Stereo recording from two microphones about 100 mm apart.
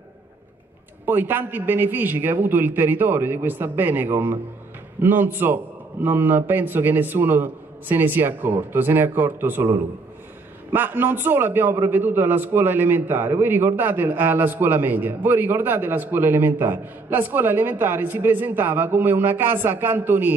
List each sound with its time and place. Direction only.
1.0 s a man's voice: 20° right (ahead or behind)